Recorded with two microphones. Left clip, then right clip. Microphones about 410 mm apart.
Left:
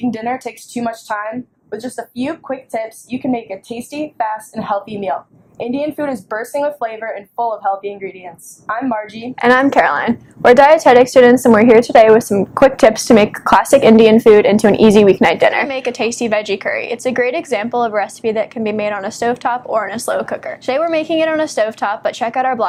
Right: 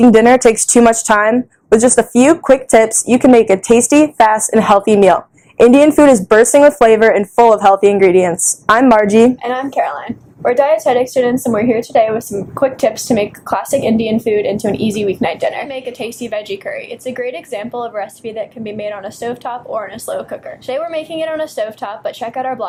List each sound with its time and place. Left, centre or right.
0.1 s speech: right
9.4 s a woman's voice: left